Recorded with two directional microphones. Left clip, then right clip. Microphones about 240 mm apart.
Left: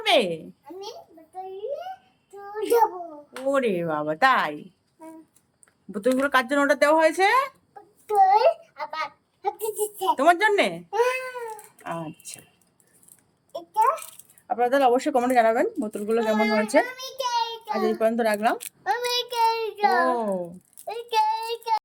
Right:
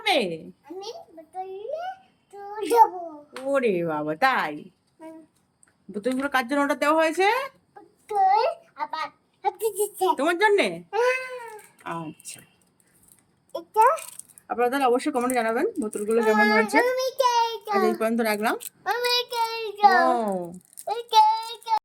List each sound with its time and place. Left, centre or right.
0.0 s a child's voice: centre
0.6 s a sound: centre
2.6 s a child's voice: centre
6.2 s a child's voice: centre
10.2 s speech: centre
11.4 s a sound: centre
13.5 s a child's voice: centre
14.4 s speech: centre
16.4 s a child's voice: centre
16.7 s child singing: centre
18.0 s a child's voice: centre
20.8 s a sound: centre